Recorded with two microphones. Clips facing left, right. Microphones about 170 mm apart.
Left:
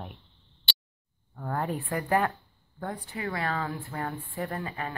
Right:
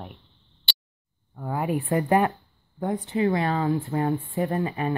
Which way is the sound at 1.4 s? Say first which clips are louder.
Right 4 dB; 10° right (ahead or behind).